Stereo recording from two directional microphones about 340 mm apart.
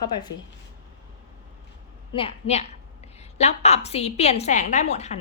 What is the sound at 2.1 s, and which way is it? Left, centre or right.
A woman's voice, centre.